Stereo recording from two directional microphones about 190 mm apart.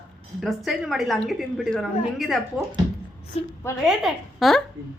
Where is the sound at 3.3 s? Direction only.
35° left (ahead or behind).